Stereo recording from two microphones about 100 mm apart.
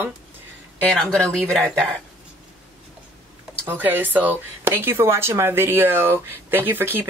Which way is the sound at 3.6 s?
20° right (ahead or behind).